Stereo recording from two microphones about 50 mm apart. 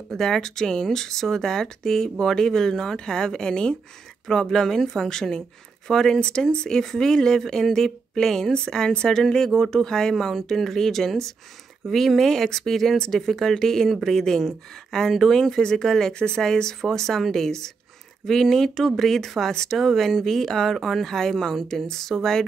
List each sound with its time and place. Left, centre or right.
0.1 s speech: centre